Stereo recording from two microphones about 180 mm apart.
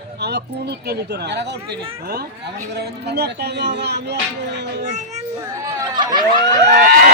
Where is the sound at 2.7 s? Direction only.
65° right (ahead or behind).